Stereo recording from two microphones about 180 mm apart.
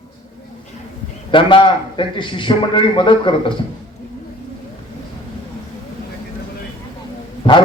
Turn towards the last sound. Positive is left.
turn(degrees=30)  # may be behind; listen again after turning